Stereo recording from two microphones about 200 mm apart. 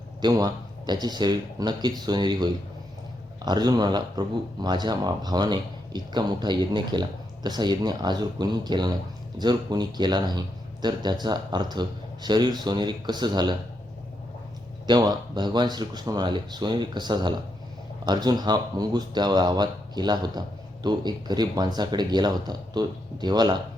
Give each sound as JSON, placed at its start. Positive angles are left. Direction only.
{"t": 0.2, "sound": "speech", "side_deg": -20}
{"t": 14.8, "sound": "speech", "side_deg": -20}